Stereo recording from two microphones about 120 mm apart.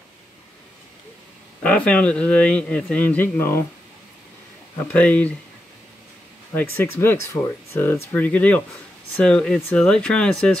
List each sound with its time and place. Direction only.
1.6 s speech: 10° left (ahead or behind)
4.9 s speech: 10° left (ahead or behind)
6.5 s speech: 20° left (ahead or behind)